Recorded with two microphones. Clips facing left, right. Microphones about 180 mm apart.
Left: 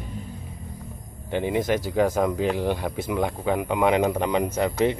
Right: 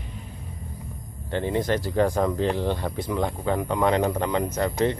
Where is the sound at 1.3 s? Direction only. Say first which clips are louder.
Left 1 dB; 10° left (ahead or behind).